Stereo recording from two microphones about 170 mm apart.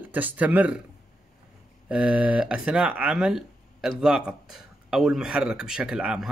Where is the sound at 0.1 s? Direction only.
10° right (ahead or behind).